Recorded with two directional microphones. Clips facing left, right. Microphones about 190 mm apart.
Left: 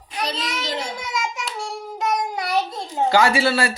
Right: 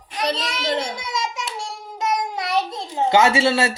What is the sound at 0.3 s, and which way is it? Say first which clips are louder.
Speech: right 6 dB; 65° right (ahead or behind).